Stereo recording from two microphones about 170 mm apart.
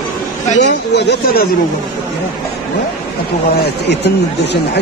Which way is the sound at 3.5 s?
75° left (ahead or behind).